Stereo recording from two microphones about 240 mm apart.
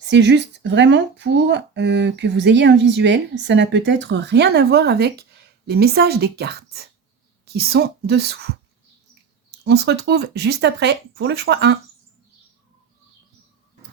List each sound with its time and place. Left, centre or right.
0.1 s a woman's voice: right
9.6 s speech: right